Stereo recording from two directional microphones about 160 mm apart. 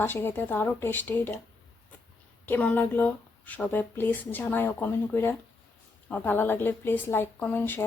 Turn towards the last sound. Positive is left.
turn(degrees=10)  # may be behind; listen again after turning